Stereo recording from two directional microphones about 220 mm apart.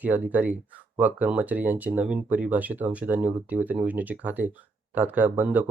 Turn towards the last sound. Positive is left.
turn(degrees=-10)  # may be behind; listen again after turning